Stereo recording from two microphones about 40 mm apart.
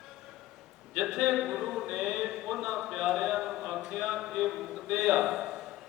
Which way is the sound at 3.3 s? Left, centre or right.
Centre.